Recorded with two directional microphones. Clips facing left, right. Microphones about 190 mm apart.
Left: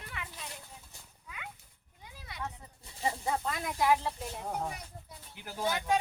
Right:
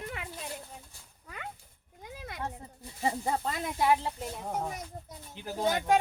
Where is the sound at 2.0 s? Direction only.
50° right (ahead or behind).